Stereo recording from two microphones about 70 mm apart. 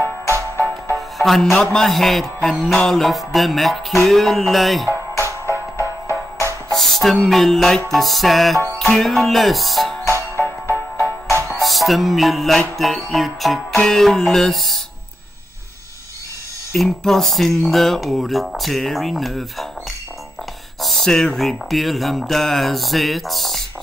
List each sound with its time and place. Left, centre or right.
0.3 s music: right
0.9 s music: centre
5.1 s music: left
6.7 s music: centre
11.6 s music: centre
16.7 s music: centre
20.8 s music: centre